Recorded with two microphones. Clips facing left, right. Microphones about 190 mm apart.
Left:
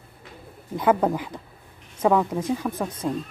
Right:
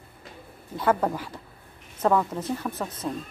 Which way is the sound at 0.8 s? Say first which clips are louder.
Left 3 dB; 15° left (ahead or behind).